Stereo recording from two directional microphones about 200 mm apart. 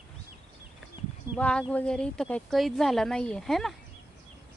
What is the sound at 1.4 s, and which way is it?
Speech, 5° left (ahead or behind).